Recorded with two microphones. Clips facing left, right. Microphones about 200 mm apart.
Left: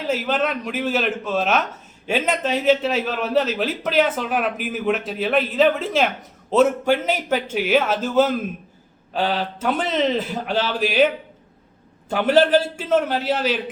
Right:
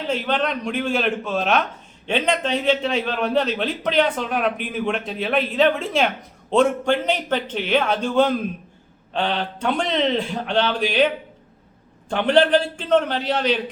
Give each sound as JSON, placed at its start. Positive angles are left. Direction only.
{"t": 0.1, "sound": "a man's voice", "side_deg": 5}